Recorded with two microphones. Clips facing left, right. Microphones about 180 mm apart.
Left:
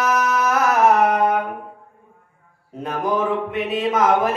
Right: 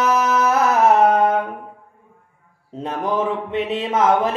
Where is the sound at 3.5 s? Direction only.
25° right (ahead or behind).